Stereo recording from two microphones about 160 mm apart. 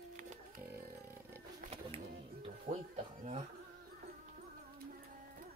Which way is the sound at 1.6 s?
40° right (ahead or behind).